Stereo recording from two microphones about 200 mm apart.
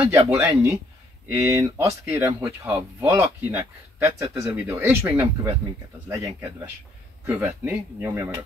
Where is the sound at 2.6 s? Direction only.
5° right (ahead or behind).